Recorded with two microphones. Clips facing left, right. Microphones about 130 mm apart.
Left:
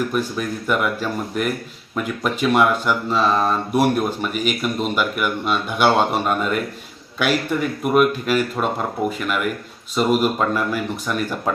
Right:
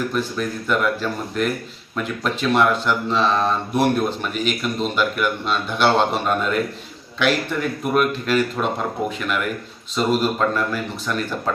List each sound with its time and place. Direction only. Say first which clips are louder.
0.1 s speech: left 1 dB; 10° left (ahead or behind)